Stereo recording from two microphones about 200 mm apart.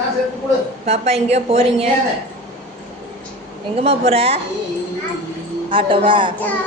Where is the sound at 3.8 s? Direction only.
30° right (ahead or behind).